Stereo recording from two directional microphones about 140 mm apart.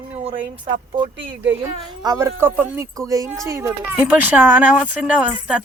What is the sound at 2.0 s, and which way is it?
Speech, 25° right (ahead or behind).